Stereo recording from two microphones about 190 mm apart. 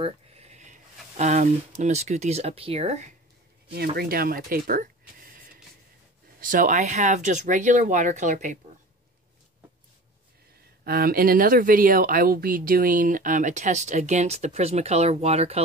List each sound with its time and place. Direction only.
0.0 s a sound: 35° right (ahead or behind)
1.1 s speech: 40° right (ahead or behind)
3.7 s speech: 55° right (ahead or behind)
10.8 s speech: 50° right (ahead or behind); by 15.6 s 35° right (ahead or behind)